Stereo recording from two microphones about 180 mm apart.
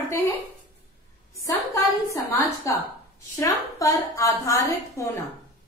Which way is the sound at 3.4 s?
15° left (ahead or behind).